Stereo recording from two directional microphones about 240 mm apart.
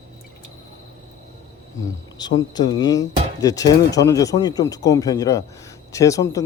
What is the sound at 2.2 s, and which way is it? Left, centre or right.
Speech, centre.